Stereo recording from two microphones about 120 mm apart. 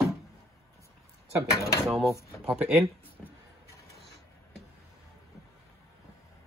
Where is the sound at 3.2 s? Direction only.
5° left (ahead or behind).